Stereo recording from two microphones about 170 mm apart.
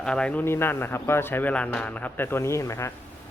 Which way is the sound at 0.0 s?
5° left (ahead or behind).